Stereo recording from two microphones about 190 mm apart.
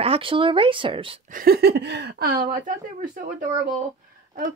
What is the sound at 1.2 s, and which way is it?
Speech, 50° right (ahead or behind).